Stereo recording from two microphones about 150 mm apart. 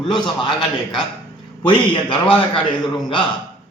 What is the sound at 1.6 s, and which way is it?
Speech, 30° left (ahead or behind).